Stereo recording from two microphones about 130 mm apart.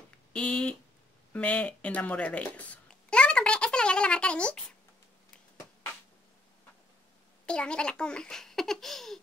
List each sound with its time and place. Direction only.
0.3 s speech: 10° left (ahead or behind)
1.3 s a sound: 10° left (ahead or behind)
7.4 s a child's voice: 10° left (ahead or behind)